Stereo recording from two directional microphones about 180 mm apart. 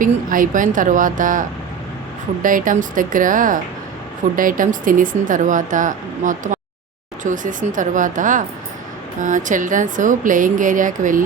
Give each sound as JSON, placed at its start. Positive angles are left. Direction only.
{"t": 0.0, "sound": "speech", "side_deg": -50}